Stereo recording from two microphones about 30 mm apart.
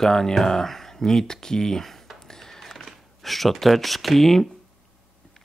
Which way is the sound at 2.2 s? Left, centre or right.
Centre.